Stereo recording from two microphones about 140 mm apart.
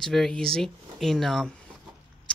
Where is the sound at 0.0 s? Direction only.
5° left (ahead or behind).